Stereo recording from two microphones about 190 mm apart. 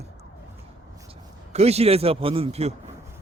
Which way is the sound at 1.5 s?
35° right (ahead or behind).